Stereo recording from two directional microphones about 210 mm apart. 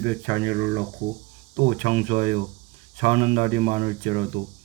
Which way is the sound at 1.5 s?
35° right (ahead or behind).